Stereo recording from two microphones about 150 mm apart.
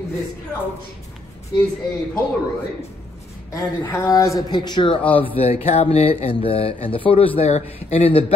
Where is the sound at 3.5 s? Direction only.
20° left (ahead or behind); by 8.2 s 40° left (ahead or behind).